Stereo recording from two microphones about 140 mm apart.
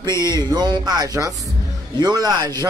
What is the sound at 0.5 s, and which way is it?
Speech, 30° right (ahead or behind).